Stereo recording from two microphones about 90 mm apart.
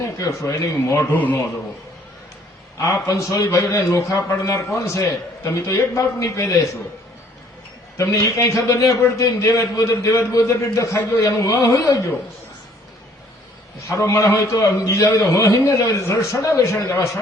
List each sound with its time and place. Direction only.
0.0 s a man's voice: 35° left (ahead or behind)
1.1 s a man's voice: 20° left (ahead or behind)
2.7 s a man's voice: 35° left (ahead or behind)
7.9 s a man's voice: 35° left (ahead or behind)
13.8 s a man's voice: 35° left (ahead or behind)